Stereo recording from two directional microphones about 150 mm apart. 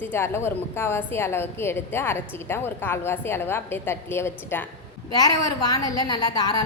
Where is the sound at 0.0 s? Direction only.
15° left (ahead or behind).